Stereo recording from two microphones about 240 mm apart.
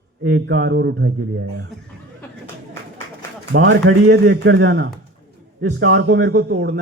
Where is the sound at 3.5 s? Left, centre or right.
Right.